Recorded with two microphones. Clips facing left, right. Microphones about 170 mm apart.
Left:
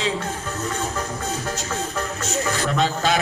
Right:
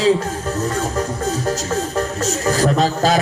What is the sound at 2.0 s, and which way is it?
A man's voice, 35° right (ahead or behind).